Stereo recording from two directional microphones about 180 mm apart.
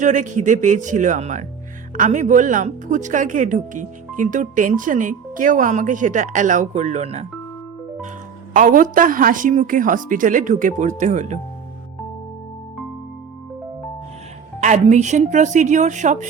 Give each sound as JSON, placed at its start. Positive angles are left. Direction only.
{"t": 0.0, "sound": "speech", "side_deg": -45}
{"t": 8.5, "sound": "speech", "side_deg": -45}
{"t": 14.6, "sound": "speech", "side_deg": -40}